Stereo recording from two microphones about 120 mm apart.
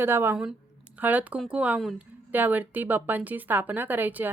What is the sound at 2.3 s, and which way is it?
A woman's voice, 15° right (ahead or behind).